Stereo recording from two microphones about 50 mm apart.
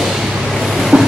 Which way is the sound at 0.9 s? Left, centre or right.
Centre.